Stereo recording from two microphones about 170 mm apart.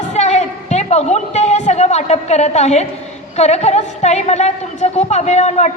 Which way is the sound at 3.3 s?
40° left (ahead or behind).